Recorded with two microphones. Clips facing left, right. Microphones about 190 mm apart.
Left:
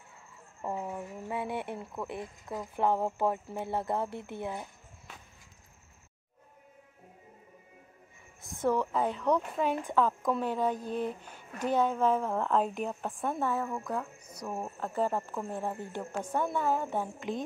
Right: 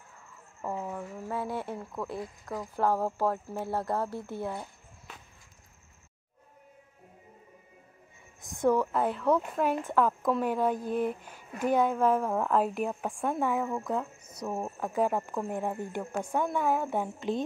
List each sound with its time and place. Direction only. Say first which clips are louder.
0.7 s speech: right 1 dB; 10° left (ahead or behind)
8.4 s a sound: right 3 dB; 15° right (ahead or behind)
9.0 s speech: right 2 dB; 5° right (ahead or behind)